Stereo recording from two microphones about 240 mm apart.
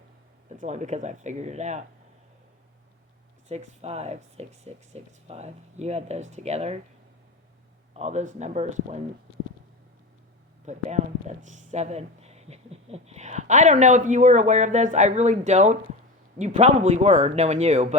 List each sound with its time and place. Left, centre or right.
0.4 s speech: right
3.5 s speech: right
7.9 s speech: right
10.7 s speech: right